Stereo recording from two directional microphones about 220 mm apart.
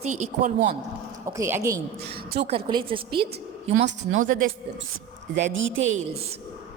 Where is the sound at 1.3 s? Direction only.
10° right (ahead or behind).